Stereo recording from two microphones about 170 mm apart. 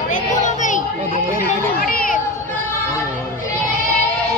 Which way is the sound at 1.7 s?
60° left (ahead or behind).